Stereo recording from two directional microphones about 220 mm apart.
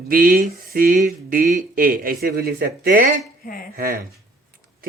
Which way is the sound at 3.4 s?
40° left (ahead or behind).